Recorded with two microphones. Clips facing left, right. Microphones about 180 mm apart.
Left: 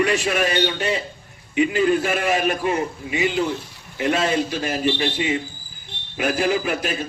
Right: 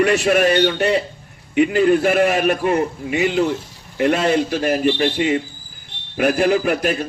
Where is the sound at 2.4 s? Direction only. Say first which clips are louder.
Right 4 dB; 50° right (ahead or behind).